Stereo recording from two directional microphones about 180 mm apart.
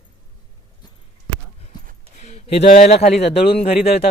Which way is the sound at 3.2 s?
35° left (ahead or behind).